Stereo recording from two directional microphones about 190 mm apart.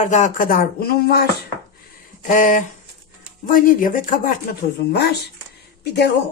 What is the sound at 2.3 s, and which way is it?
Speech, 45° left (ahead or behind).